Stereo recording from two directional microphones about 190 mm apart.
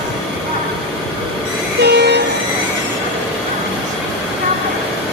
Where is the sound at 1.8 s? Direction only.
60° right (ahead or behind).